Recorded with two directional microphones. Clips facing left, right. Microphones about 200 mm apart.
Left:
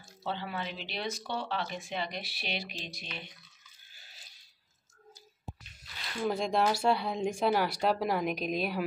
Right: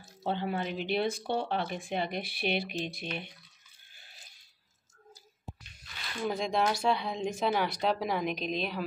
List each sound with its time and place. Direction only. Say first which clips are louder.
0.2 s speech: right 4 dB; 50° right (ahead or behind)
6.2 s speech: left 1 dB; centre (ahead or behind)